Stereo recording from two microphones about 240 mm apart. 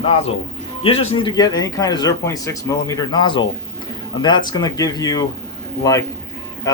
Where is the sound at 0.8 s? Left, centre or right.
Left.